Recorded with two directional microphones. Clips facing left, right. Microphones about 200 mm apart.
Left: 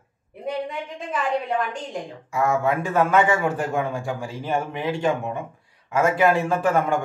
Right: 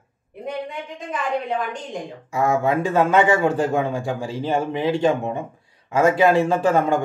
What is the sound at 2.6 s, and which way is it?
A man's voice, 25° right (ahead or behind).